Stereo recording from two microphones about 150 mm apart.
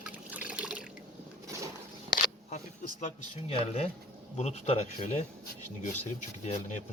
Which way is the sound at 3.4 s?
40° left (ahead or behind).